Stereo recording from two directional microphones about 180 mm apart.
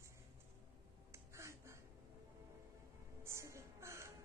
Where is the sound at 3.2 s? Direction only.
15° right (ahead or behind).